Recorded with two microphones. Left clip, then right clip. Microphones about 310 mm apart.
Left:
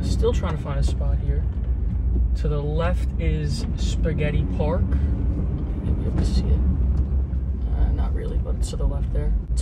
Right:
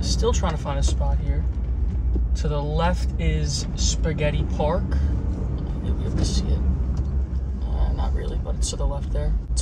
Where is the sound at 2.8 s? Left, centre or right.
Centre.